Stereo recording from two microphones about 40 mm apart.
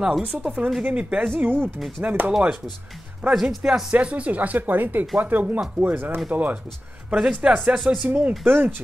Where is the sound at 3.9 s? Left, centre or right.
Right.